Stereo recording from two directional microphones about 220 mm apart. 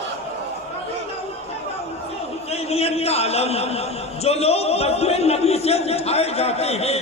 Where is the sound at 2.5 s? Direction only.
30° left (ahead or behind).